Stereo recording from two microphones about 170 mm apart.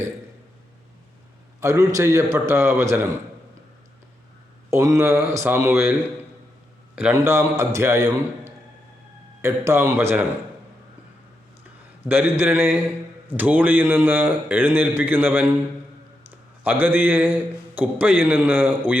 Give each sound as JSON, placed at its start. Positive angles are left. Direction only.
{"t": 1.6, "sound": "a man's voice", "side_deg": -20}
{"t": 4.7, "sound": "a man's voice", "side_deg": -15}
{"t": 7.1, "sound": "a man's voice", "side_deg": -15}
{"t": 12.0, "sound": "a man's voice", "side_deg": -10}